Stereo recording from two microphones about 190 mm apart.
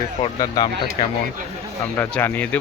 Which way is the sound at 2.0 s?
10° left (ahead or behind).